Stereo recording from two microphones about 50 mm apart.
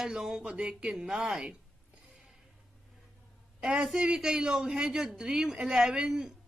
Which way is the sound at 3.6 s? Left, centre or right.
Centre.